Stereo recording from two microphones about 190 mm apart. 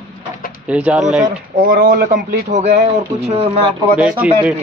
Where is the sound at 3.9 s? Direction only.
5° right (ahead or behind).